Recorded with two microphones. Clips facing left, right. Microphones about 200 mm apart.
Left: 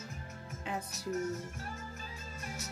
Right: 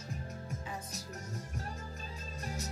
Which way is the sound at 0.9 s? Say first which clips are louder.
Left 9 dB; 35° right (ahead or behind).